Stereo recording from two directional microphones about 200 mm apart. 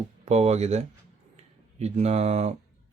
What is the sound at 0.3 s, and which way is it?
Speech, 30° right (ahead or behind).